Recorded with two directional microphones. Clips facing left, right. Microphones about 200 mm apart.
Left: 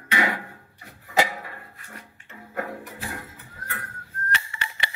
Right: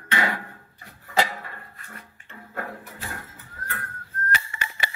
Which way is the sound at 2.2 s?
15° left (ahead or behind).